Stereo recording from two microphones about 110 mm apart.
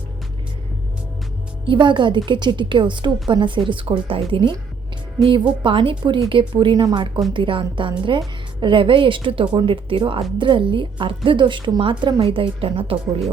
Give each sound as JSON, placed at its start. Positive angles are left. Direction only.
{"t": 1.6, "sound": "a woman's voice", "side_deg": -45}